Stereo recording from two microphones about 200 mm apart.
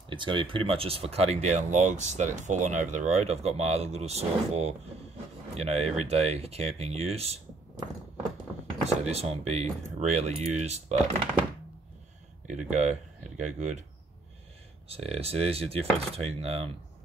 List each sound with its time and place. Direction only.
0.1 s speech: 25° right (ahead or behind)
9.1 s speech: 30° right (ahead or behind)
12.4 s speech: 35° right (ahead or behind)
14.9 s speech: 30° right (ahead or behind)